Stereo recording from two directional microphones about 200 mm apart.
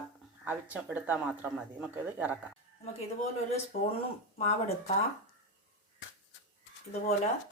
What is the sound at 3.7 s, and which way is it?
Speech, 45° left (ahead or behind).